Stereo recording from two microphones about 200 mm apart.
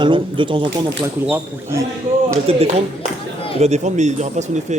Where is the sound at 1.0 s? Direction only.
15° right (ahead or behind).